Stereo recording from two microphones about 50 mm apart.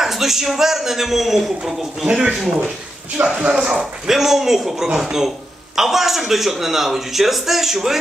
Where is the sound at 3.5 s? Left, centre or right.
Centre.